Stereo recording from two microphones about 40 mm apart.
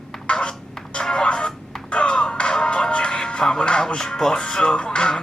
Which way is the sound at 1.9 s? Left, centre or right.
Left.